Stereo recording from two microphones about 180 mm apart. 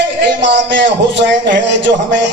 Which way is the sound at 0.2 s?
80° right.